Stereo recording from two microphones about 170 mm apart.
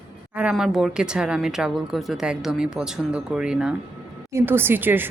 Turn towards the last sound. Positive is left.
turn(degrees=-10)  # may be behind; listen again after turning